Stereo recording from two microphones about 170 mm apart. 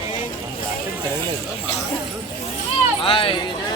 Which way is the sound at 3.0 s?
30° left (ahead or behind).